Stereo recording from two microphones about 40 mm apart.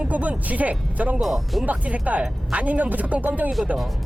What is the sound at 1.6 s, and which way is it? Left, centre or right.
Speech, right.